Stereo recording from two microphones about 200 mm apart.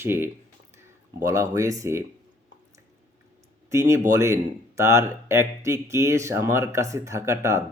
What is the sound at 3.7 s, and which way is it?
Speech, 15° right (ahead or behind).